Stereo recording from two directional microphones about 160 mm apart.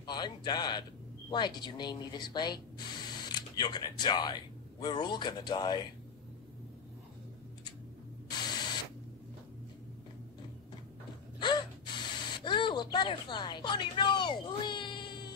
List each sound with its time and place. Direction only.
0.0 s speech: 25° left (ahead or behind)
8.3 s camera: 25° left (ahead or behind)
11.3 s gasp: 30° left (ahead or behind)